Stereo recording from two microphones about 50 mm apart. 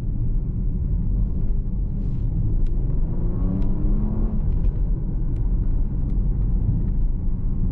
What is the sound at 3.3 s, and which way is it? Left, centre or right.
Vehicle, centre.